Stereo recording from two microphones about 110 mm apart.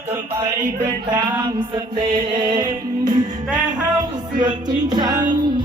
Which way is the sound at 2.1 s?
40° right (ahead or behind).